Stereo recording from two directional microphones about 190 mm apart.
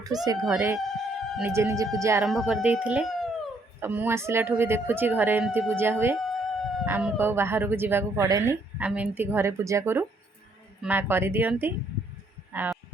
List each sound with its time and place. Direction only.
0.5 s a woman's voice: 15° right (ahead or behind)
2.2 s speech: centre (ahead or behind)
3.8 s a woman's voice: 10° right (ahead or behind)
6.1 s a sound: centre (ahead or behind)
6.8 s a woman's voice: 10° right (ahead or behind)